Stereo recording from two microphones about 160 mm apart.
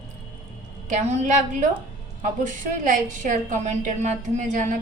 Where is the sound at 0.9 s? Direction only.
50° right (ahead or behind).